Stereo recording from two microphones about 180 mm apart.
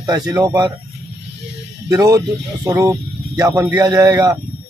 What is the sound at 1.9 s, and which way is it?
Speech, 20° right (ahead or behind).